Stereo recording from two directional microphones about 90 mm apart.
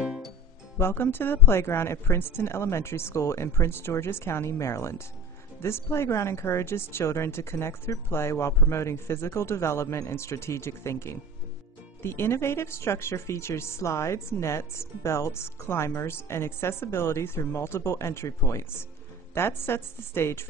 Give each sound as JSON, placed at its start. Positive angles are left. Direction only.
{"t": 0.0, "sound": "music", "side_deg": -5}
{"t": 0.7, "sound": "speech", "side_deg": 25}